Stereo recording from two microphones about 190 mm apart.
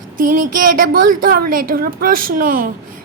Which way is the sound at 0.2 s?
45° right (ahead or behind).